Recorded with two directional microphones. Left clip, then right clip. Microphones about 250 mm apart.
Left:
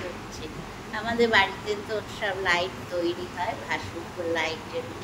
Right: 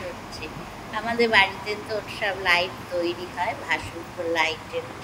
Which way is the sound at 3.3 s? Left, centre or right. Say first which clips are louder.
Right 3 dB; right.